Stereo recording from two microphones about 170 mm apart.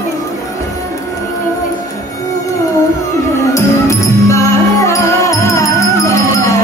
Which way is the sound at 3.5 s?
20° left (ahead or behind).